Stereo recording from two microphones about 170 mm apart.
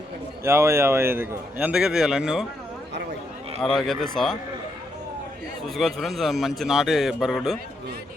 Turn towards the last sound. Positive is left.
turn(degrees=0)  # may be behind; listen again after turning